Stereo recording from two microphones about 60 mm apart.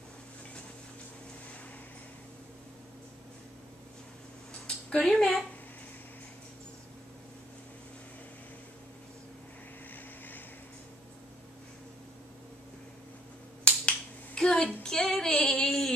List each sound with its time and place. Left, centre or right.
4.6 s a sound: centre
5.0 s speech: centre
13.7 s finger snapping: centre
14.8 s child singing: centre